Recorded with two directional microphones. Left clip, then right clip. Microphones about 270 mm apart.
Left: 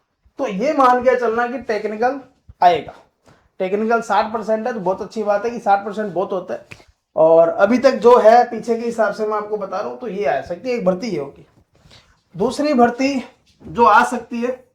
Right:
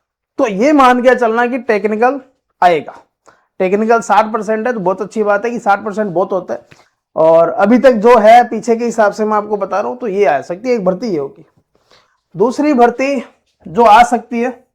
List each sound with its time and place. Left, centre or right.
0.3 s a man's voice: right
8.6 s speech: right